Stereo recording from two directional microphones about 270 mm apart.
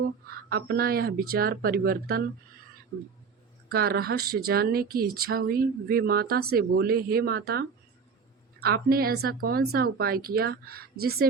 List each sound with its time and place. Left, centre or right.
0.5 s speech: right
3.7 s speech: right